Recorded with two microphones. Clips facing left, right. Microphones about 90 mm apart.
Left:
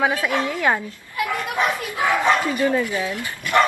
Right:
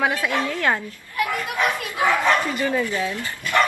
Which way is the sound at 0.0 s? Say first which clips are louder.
Left 1 dB; 15° left (ahead or behind).